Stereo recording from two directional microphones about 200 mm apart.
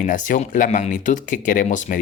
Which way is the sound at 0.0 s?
40° left (ahead or behind).